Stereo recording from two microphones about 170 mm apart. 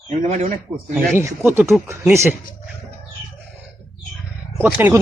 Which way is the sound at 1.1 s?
15° right (ahead or behind).